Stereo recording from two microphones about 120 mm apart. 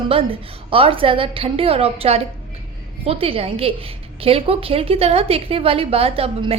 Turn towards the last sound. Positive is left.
turn(degrees=-55)  # may be behind; listen again after turning